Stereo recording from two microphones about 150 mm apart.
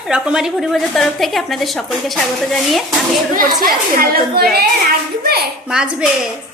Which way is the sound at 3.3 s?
70° right (ahead or behind).